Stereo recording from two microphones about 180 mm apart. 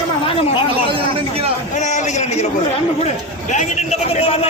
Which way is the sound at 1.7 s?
40° left (ahead or behind).